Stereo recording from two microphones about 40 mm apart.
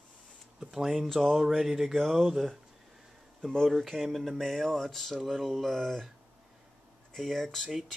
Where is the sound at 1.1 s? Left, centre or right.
Centre.